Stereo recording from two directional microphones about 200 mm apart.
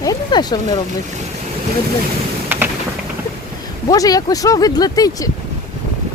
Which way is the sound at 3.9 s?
20° left (ahead or behind).